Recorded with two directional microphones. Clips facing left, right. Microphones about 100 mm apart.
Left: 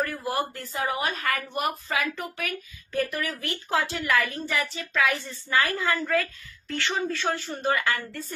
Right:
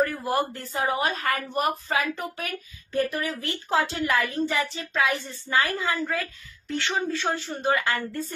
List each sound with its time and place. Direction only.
0.0 s a woman's voice: 30° right (ahead or behind)